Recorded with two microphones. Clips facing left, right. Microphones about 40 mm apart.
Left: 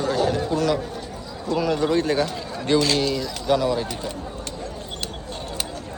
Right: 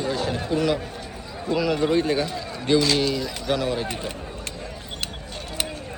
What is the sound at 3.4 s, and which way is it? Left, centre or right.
Speech, right.